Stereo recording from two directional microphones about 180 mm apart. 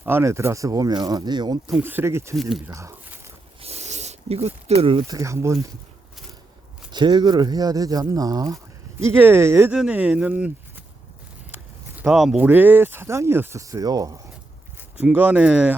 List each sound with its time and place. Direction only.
0.0 s speech: 15° right (ahead or behind)
1.7 s speech: 10° right (ahead or behind)
2.3 s speech: centre (ahead or behind)
2.6 s speech: 15° right (ahead or behind)
3.6 s a sound: 35° right (ahead or behind)
5.0 s speech: 15° right (ahead or behind)
6.9 s speech: 25° right (ahead or behind)
14.9 s speech: 10° right (ahead or behind)